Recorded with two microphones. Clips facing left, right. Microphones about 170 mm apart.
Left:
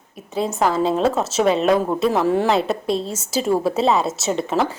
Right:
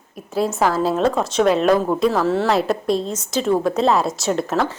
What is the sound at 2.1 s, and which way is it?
Speech, 15° left (ahead or behind).